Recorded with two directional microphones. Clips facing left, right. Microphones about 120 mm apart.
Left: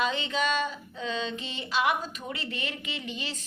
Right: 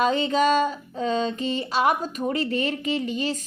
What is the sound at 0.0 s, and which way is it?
Female singing, 40° right (ahead or behind).